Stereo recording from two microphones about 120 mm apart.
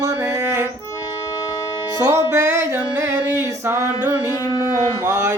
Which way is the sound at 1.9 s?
30° right (ahead or behind).